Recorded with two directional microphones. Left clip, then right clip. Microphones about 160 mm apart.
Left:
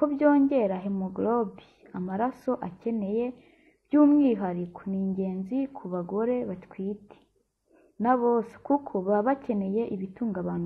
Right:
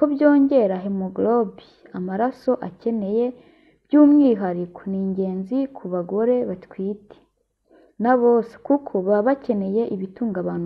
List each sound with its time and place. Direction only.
0.0 s a woman's voice: 20° right (ahead or behind)
8.0 s a woman's voice: 25° right (ahead or behind)